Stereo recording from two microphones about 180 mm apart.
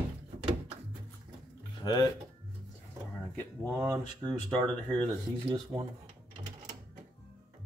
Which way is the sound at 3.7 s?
15° right (ahead or behind).